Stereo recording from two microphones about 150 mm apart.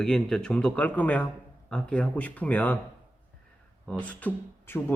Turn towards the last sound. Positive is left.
turn(degrees=10)  # may be behind; listen again after turning